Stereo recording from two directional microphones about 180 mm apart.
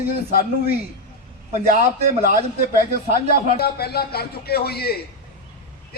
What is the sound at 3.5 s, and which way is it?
A man's voice, 60° left (ahead or behind).